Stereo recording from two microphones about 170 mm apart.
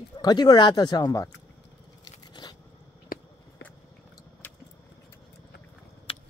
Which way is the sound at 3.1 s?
60° left (ahead or behind).